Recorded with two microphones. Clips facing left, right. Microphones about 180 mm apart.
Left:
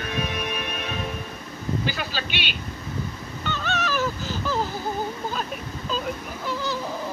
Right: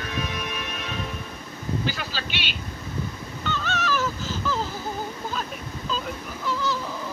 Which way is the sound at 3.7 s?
15° left (ahead or behind).